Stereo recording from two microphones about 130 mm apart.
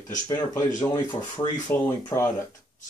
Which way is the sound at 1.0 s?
35° left (ahead or behind).